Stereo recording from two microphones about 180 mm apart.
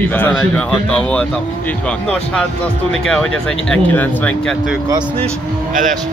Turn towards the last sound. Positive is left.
turn(degrees=-45)  # may be behind; listen again after turning